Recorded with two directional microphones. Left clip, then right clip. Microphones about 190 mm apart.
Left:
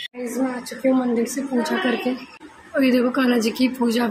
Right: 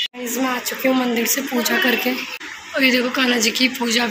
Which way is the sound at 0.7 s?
Centre (ahead or behind).